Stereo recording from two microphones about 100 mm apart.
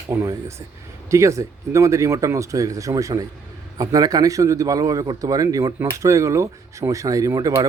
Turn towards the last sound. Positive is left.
turn(degrees=-40)  # may be behind; listen again after turning